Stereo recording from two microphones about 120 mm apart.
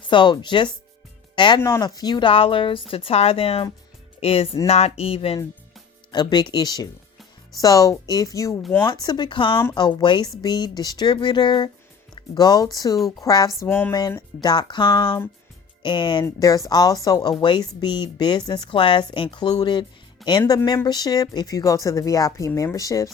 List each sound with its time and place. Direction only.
0.1 s a woman's voice: 40° left (ahead or behind)
1.8 s music: 35° left (ahead or behind); by 5.4 s 55° left (ahead or behind)
6.1 s a woman's voice: 40° left (ahead or behind)
8.9 s a woman's voice: 40° left (ahead or behind)
13.6 s a sound: 20° left (ahead or behind)
14.2 s a woman's voice: 35° left (ahead or behind)
16.2 s a woman's voice: 30° left (ahead or behind)
20.2 s speech: centre (ahead or behind)
20.8 s speech: 35° left (ahead or behind)